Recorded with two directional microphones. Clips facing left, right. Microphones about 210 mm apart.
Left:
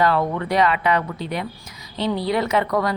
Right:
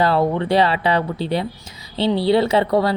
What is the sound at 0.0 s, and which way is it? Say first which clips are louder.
A woman's voice: right 3 dB; 30° right (ahead or behind).